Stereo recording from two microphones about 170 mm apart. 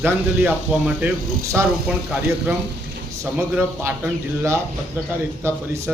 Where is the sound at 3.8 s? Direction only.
15° right (ahead or behind).